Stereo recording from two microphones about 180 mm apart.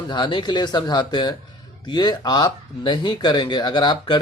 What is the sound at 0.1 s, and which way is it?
Speech, 25° left (ahead or behind).